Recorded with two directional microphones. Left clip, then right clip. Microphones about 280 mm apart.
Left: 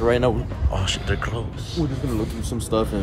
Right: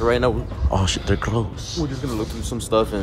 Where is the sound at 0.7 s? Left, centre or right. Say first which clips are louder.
Right 3 dB; centre.